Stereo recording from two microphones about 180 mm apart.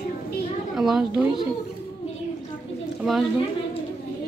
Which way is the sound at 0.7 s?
5° right (ahead or behind).